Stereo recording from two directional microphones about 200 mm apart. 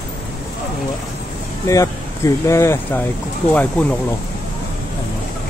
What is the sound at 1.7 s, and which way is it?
Speech, 15° left (ahead or behind).